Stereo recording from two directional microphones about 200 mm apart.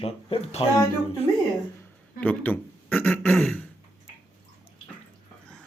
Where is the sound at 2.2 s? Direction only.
10° left (ahead or behind).